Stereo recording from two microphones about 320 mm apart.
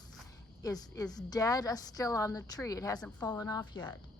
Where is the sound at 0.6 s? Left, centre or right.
Centre.